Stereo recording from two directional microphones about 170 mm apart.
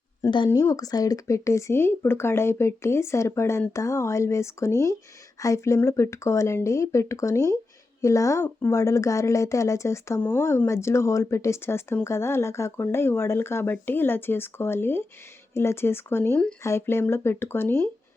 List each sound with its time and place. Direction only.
0.2 s speech: 25° left (ahead or behind)